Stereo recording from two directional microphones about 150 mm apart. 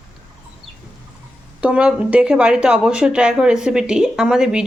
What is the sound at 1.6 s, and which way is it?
A woman's voice, 10° right (ahead or behind).